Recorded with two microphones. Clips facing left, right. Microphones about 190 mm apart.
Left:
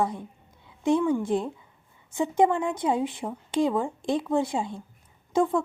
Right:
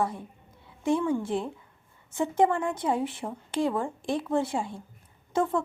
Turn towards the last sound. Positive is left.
turn(degrees=15)  # may be behind; listen again after turning